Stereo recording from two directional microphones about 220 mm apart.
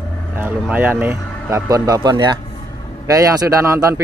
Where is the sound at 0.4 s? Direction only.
10° right (ahead or behind).